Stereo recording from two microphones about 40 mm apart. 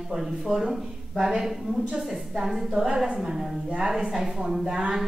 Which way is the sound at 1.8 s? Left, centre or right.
Right.